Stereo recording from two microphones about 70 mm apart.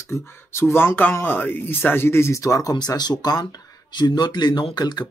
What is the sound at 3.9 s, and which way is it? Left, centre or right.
Speech, left.